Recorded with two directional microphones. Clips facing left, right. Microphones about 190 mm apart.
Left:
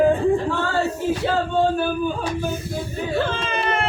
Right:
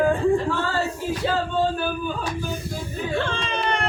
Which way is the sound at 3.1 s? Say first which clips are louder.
Left 3 dB; 5° left (ahead or behind).